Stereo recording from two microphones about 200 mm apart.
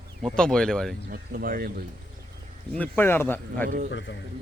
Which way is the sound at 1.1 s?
45° right (ahead or behind).